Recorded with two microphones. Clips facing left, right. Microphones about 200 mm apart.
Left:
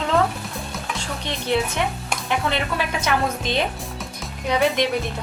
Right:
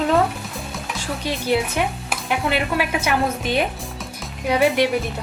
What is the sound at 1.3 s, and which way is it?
Speech, 10° right (ahead or behind).